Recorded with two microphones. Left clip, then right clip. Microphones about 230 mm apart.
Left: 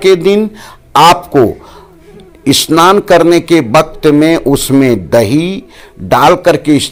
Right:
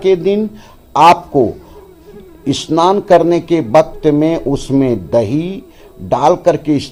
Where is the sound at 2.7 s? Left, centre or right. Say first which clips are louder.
Left 5 dB; left.